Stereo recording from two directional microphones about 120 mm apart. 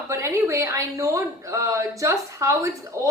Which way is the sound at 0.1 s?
25° right (ahead or behind).